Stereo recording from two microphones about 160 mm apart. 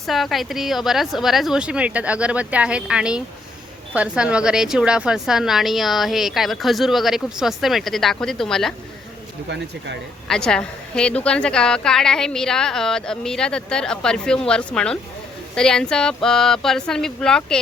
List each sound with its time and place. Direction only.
0.0 s a woman's voice: centre (ahead or behind)
9.5 s speech: 90° right
10.2 s a woman's voice: 5° left (ahead or behind)